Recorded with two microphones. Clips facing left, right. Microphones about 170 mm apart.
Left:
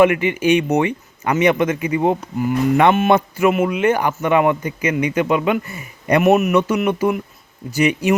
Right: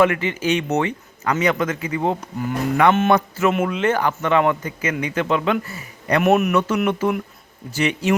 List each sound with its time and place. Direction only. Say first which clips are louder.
0.0 s speech: left 4 dB; 15° left (ahead or behind)
6.2 s a man's voice: left 2 dB; 5° left (ahead or behind)